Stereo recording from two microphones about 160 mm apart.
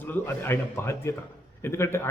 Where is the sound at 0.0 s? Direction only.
15° left (ahead or behind).